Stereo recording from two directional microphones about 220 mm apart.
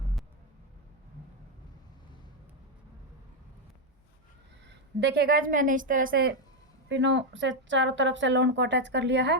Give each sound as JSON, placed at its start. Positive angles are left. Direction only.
{"t": 4.9, "sound": "a woman's voice", "side_deg": -45}
{"t": 6.8, "sound": "speech", "side_deg": -55}